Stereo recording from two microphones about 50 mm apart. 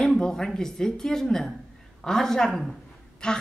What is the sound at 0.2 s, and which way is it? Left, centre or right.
A woman's voice, centre.